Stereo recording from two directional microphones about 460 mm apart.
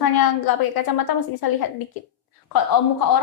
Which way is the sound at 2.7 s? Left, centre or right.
Left.